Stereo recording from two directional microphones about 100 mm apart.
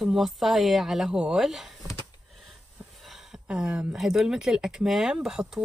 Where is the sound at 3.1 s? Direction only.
5° right (ahead or behind).